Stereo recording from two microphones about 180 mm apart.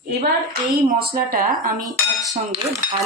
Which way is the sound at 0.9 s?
55° right (ahead or behind).